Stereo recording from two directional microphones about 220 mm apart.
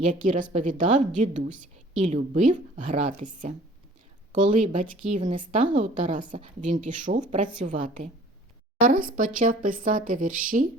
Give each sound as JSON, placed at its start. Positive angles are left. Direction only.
{"t": 0.1, "sound": "a woman's voice", "side_deg": -35}